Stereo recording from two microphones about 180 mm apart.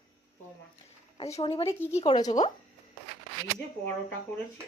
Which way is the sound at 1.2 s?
35° left (ahead or behind).